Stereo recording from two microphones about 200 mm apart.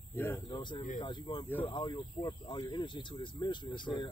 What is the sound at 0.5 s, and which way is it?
Speech, 25° left (ahead or behind).